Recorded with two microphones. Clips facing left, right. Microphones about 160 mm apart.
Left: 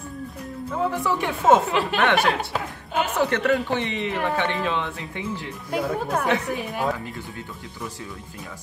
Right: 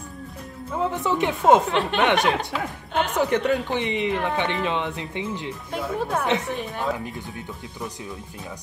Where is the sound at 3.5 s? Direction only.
15° right (ahead or behind).